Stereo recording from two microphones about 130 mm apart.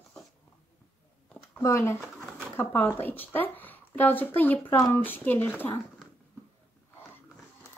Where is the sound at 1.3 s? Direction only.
10° left (ahead or behind).